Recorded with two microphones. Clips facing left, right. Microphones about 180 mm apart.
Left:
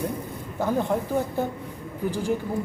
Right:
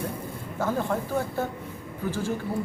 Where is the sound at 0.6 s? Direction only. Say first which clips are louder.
Left 3 dB; 15° left (ahead or behind).